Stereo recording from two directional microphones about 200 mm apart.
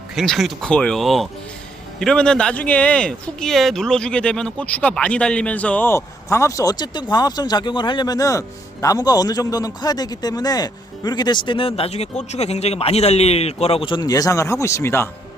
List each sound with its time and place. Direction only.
0.2 s speech: centre (ahead or behind)